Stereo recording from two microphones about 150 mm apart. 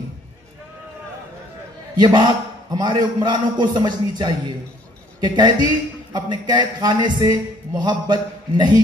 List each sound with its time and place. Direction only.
2.0 s a man's voice: 30° right (ahead or behind)